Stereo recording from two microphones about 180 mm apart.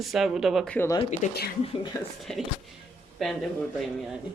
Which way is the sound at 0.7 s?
15° left (ahead or behind).